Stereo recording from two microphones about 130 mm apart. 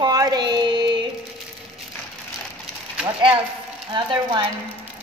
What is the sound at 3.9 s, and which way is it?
Speech, 35° right (ahead or behind).